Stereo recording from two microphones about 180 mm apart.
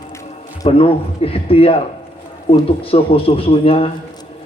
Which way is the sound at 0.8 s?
30° left (ahead or behind).